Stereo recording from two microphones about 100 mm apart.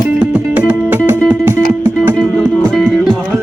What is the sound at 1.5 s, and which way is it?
Music, 25° right (ahead or behind).